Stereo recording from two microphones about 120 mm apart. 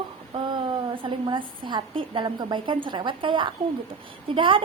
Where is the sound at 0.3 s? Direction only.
45° right (ahead or behind).